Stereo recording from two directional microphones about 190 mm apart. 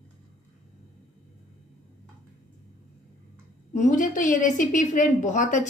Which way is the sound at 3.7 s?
40° left (ahead or behind).